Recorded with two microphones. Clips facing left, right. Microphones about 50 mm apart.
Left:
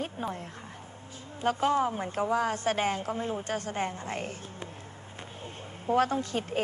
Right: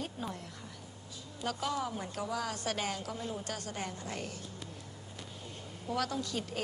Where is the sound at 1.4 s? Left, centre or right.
Left.